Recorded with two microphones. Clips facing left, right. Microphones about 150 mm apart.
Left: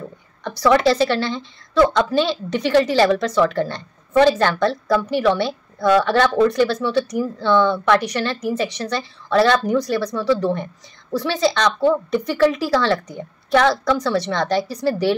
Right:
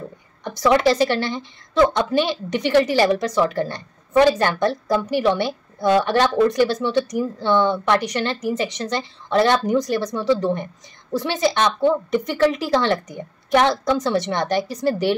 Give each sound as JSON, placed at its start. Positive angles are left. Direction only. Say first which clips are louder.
{"t": 0.4, "sound": "a woman's voice", "louder": "left 1 dB", "side_deg": -15}